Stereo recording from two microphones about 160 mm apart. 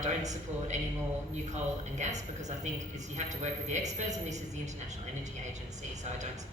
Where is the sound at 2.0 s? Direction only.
45° right (ahead or behind).